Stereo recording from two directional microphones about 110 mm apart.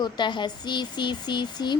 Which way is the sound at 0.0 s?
45° left (ahead or behind).